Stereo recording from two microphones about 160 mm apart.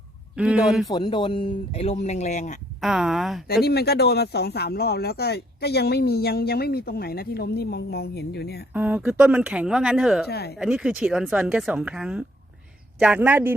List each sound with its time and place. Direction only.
0.3 s speech: 5° right (ahead or behind)
0.9 s speech: 25° left (ahead or behind); by 2.6 s 50° left (ahead or behind)
2.8 s speech: 5° right (ahead or behind)
3.4 s speech: 75° left (ahead or behind)
8.7 s speech: 10° right (ahead or behind)
10.2 s speech: 85° left
10.6 s speech: 5° right (ahead or behind)